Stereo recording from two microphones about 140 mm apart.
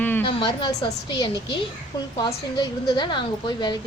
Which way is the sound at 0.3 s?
35° left (ahead or behind).